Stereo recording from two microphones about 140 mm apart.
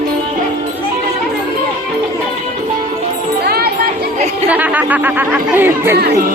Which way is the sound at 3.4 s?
90° right.